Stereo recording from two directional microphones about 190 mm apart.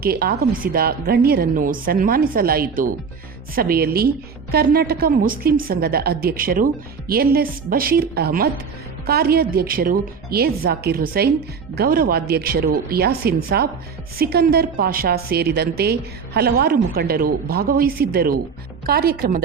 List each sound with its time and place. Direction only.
0.0 s a woman's voice: 55° right (ahead or behind)